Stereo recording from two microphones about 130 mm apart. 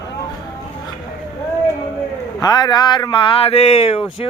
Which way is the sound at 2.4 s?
35° left (ahead or behind).